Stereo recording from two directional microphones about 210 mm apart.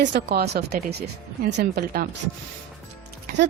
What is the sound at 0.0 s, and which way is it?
Speech, 55° right (ahead or behind).